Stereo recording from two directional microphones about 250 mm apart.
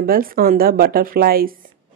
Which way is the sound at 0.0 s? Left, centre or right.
Right.